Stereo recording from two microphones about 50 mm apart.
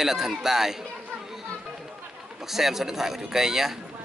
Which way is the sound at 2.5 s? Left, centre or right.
Centre.